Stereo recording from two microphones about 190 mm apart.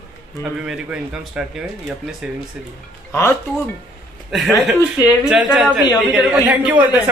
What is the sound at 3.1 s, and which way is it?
Speech, 15° left (ahead or behind).